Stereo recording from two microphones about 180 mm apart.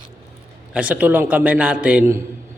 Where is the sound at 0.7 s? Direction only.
10° right (ahead or behind).